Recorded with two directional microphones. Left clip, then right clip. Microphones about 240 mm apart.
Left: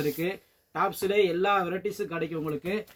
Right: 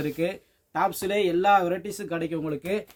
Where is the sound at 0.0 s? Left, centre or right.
Right.